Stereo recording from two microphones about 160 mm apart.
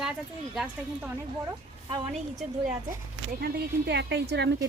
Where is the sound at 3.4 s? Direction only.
85° right.